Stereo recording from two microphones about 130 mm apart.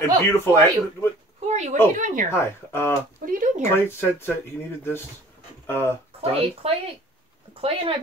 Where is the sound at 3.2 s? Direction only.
85° right.